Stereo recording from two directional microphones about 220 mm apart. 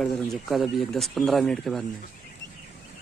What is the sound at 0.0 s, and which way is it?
Speech, centre (ahead or behind).